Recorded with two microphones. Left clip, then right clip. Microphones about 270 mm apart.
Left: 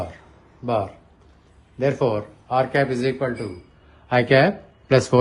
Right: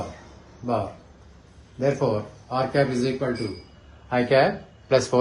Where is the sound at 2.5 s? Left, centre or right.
Centre.